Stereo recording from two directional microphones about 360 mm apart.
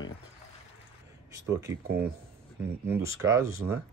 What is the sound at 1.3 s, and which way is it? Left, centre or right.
Speech, centre.